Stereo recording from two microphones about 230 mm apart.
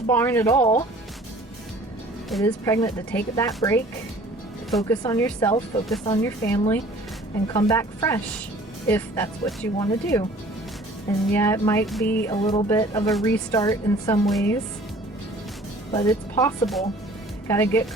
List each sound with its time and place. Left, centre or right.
0.1 s speech: centre
2.4 s speech: centre
11.3 s speech: centre
12.3 s speech: left
14.3 s a woman's voice: centre
15.9 s speech: centre